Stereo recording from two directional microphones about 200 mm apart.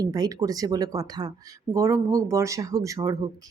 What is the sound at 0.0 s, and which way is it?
Speech, 20° right (ahead or behind).